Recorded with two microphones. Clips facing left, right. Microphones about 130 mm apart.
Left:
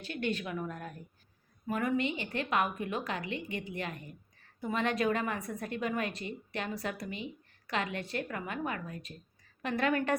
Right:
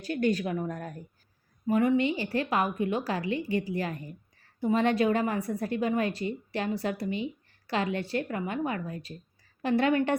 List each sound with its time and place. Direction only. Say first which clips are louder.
0.0 s a woman's voice: right 7 dB; 40° right (ahead or behind)
1.6 s a woman's voice: right 7 dB; 25° right (ahead or behind)